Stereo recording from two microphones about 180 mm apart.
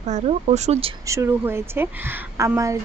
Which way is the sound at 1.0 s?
15° right (ahead or behind).